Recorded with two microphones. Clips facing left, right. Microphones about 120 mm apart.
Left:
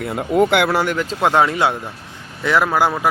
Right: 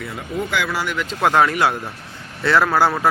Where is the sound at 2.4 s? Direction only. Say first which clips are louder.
Even; 15° left (ahead or behind).